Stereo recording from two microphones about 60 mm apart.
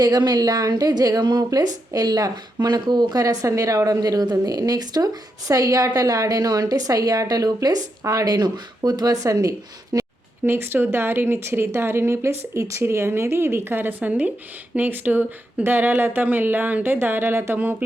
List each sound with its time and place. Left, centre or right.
0.0 s speech: right
10.4 s speech: right